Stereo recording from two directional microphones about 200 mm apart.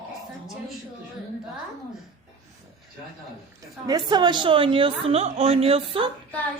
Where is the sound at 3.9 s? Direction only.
20° right (ahead or behind).